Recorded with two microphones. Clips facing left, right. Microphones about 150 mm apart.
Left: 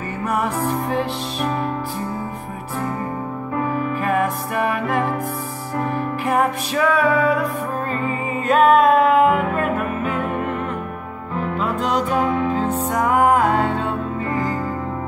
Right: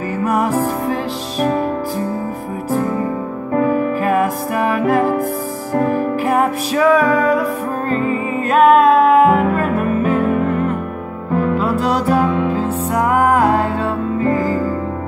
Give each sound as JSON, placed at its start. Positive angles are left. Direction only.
{"t": 0.4, "sound": "music", "side_deg": -40}
{"t": 3.5, "sound": "music", "side_deg": -50}
{"t": 8.5, "sound": "music", "side_deg": -40}
{"t": 11.8, "sound": "music", "side_deg": -35}